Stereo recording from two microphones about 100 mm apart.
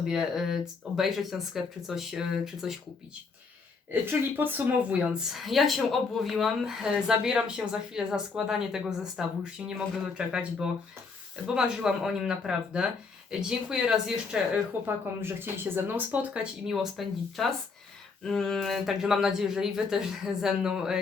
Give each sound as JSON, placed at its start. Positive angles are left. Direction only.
{"t": 0.0, "sound": "speech", "side_deg": -5}
{"t": 4.0, "sound": "a woman's voice", "side_deg": -20}
{"t": 14.8, "sound": "a woman's voice", "side_deg": -20}